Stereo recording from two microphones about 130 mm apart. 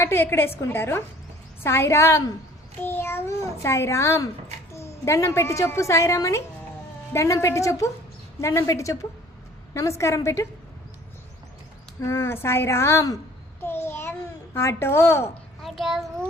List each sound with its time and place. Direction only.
0.0 s a woman's voice: 20° left (ahead or behind)
11.9 s a woman's voice: 20° left (ahead or behind)
13.6 s babbling: 20° left (ahead or behind)
15.6 s a child's voice: centre (ahead or behind)